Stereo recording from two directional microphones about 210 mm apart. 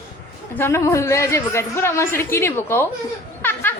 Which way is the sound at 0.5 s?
10° left (ahead or behind).